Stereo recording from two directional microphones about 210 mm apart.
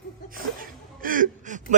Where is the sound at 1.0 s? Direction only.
40° right (ahead or behind).